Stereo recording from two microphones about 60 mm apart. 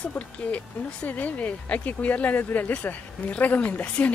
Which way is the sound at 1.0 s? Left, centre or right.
Left.